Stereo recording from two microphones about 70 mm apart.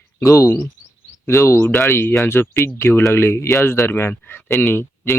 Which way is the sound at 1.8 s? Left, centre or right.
Left.